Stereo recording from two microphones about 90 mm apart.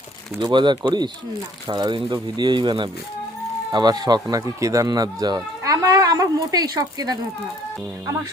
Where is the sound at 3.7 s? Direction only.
45° right (ahead or behind).